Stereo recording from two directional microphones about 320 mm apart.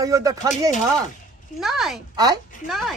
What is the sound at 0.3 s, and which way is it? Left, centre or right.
Speech, left.